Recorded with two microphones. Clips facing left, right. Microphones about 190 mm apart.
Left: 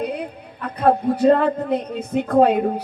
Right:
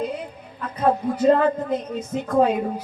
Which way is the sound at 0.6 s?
65° left (ahead or behind).